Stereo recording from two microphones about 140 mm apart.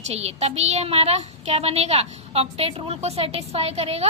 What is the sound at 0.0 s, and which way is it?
A child's voice, 50° right (ahead or behind).